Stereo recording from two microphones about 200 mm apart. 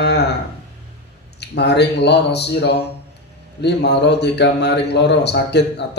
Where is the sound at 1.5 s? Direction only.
55° left (ahead or behind).